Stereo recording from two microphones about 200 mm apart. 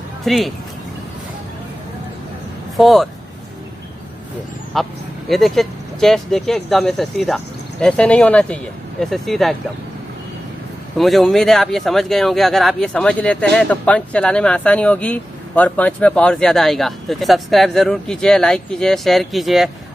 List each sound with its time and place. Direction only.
0.2 s speech: centre (ahead or behind)
2.8 s speech: centre (ahead or behind)
4.7 s speech: centre (ahead or behind)
11.0 s speech: centre (ahead or behind)